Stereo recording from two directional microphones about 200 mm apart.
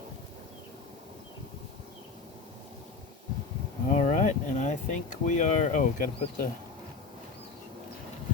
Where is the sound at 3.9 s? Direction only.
35° left (ahead or behind).